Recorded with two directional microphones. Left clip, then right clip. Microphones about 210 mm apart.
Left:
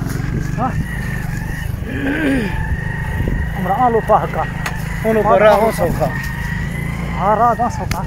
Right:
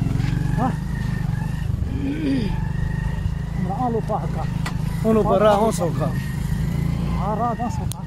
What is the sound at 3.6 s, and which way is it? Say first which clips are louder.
Speech: left 10 dB; 25° left (ahead or behind).